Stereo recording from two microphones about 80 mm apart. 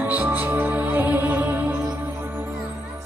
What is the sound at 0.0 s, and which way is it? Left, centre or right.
Music, right.